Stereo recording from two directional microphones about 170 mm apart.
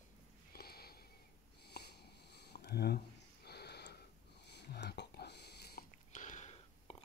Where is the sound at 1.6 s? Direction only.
70° left (ahead or behind).